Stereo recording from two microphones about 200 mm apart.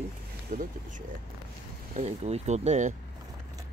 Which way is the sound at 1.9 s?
35° right (ahead or behind).